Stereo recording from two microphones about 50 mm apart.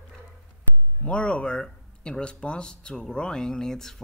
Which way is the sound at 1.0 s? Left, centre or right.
Left.